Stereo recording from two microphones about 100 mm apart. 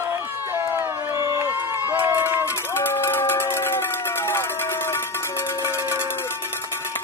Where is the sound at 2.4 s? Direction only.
25° left (ahead or behind).